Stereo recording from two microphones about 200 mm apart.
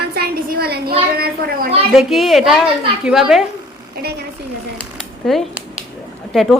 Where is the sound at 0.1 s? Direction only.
50° right (ahead or behind).